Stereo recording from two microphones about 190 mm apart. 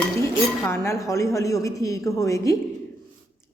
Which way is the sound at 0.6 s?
15° left (ahead or behind).